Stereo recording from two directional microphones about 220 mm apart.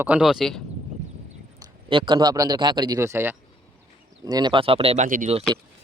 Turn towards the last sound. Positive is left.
turn(degrees=-30)  # may be behind; listen again after turning